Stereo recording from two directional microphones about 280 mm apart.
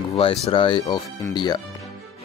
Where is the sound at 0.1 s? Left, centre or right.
Centre.